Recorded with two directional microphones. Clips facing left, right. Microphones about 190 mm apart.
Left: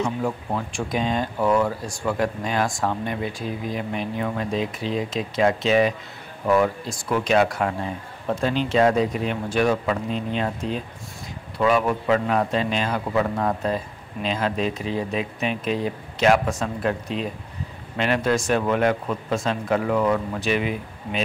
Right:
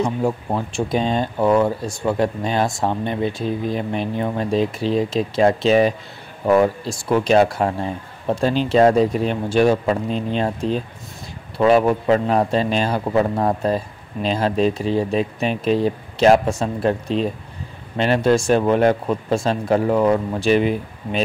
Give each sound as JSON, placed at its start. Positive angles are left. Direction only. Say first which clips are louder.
{"t": 0.0, "sound": "a man's voice", "louder": "right 4 dB", "side_deg": -30}